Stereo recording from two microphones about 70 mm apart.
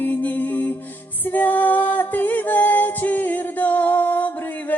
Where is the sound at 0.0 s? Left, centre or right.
Left.